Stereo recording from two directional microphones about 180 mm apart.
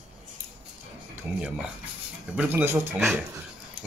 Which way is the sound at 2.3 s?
10° right (ahead or behind).